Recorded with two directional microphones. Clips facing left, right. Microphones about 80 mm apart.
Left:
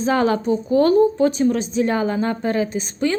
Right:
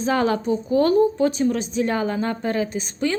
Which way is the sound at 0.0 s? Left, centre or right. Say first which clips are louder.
Left 2 dB; left.